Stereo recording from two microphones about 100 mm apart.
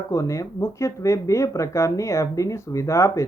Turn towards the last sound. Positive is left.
turn(degrees=30)  # may be behind; listen again after turning